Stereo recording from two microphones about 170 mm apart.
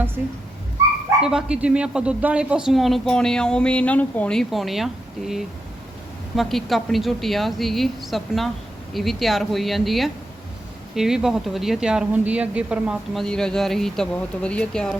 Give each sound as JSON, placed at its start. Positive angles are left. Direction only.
{"t": 0.2, "sound": "speech", "side_deg": -10}